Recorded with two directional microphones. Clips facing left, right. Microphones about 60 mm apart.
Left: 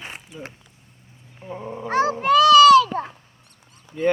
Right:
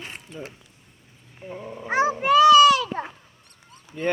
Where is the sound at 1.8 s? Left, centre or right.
Centre.